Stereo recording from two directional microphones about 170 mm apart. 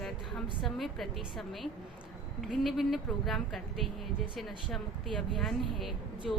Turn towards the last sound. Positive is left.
turn(degrees=0)  # may be behind; listen again after turning